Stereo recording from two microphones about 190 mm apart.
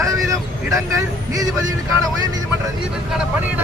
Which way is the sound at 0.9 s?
20° right (ahead or behind).